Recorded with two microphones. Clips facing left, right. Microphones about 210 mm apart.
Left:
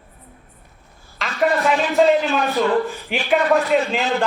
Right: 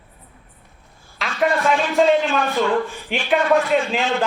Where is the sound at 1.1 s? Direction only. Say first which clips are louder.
Left 1 dB; centre (ahead or behind).